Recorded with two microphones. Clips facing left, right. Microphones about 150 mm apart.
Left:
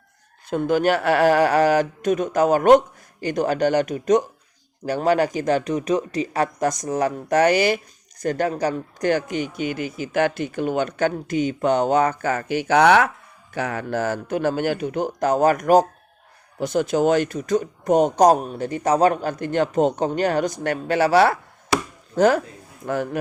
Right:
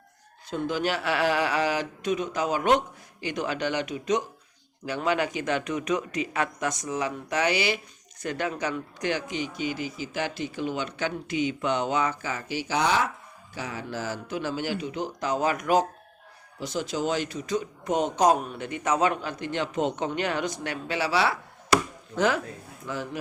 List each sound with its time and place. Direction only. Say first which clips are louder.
0.5 s speech: left 8 dB; 50° left (ahead or behind)
16.6 s speech: left 9 dB; 55° left (ahead or behind)
22.8 s speech: left 9 dB; 55° left (ahead or behind)